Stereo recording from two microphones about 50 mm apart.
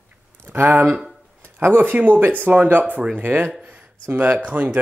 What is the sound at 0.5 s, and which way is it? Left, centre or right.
Speech, right.